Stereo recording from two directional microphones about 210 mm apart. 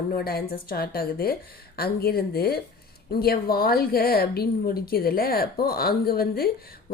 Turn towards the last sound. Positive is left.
turn(degrees=45)  # may be behind; listen again after turning